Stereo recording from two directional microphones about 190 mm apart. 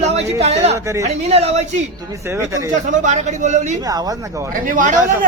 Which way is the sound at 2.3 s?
15° right (ahead or behind).